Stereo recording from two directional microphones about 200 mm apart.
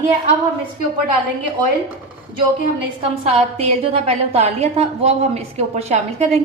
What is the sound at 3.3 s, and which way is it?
A woman's voice, 30° right (ahead or behind).